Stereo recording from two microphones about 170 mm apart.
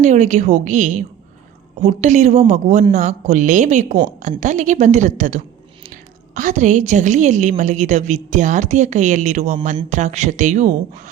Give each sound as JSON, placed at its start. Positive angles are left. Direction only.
{"t": 0.0, "sound": "a woman's voice", "side_deg": -45}